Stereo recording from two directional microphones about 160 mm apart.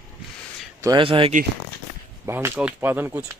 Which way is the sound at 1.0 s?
35° right (ahead or behind).